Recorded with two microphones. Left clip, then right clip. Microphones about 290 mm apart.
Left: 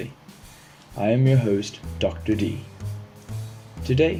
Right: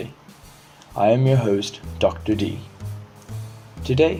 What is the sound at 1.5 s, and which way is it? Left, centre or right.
Speech, centre.